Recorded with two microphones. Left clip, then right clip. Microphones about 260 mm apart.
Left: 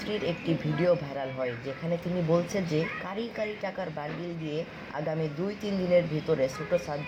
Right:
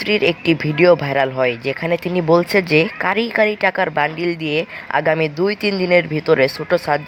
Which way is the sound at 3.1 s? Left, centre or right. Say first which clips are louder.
Right 19 dB; right.